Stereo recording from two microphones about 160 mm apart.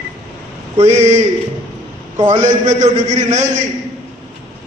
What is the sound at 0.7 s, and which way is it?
Speech, 45° right (ahead or behind).